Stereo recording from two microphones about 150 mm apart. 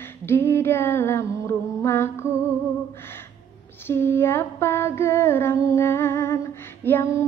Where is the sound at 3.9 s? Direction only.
15° left (ahead or behind).